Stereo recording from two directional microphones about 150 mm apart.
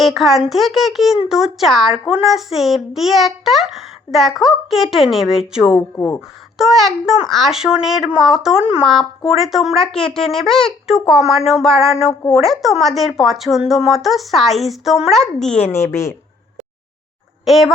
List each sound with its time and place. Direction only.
0.0 s a child's voice: centre (ahead or behind)
6.0 s speech: 15° left (ahead or behind)
6.6 s a child's voice: centre (ahead or behind)
15.7 s a woman's voice: 20° left (ahead or behind)
17.4 s speech: centre (ahead or behind)